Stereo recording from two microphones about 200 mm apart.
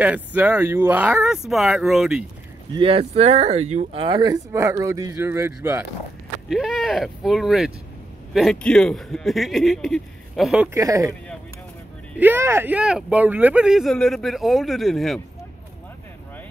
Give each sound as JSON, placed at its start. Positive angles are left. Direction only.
{"t": 0.0, "sound": "speech", "side_deg": -10}
{"t": 2.8, "sound": "speech", "side_deg": -30}
{"t": 6.5, "sound": "speech", "side_deg": 0}
{"t": 12.2, "sound": "speech", "side_deg": -10}